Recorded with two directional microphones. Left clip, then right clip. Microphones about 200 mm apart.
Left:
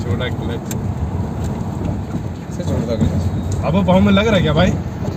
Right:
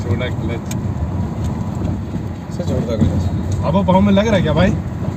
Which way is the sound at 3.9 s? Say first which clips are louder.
Even; 35° left (ahead or behind).